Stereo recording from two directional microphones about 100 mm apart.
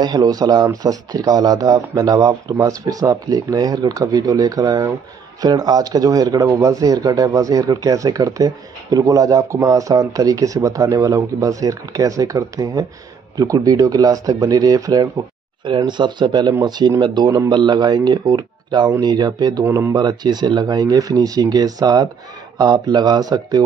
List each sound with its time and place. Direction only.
0.0 s speech: 40° right (ahead or behind)
15.6 s speech: 50° right (ahead or behind)
19.6 s speech: 25° right (ahead or behind)
20.0 s speech: 45° right (ahead or behind)